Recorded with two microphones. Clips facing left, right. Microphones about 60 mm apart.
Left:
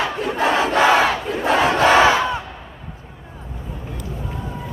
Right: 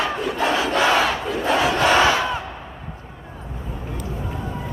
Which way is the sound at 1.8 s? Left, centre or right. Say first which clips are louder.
Left 4 dB; left.